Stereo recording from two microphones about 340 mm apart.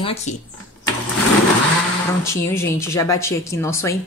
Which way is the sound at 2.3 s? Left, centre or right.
Centre.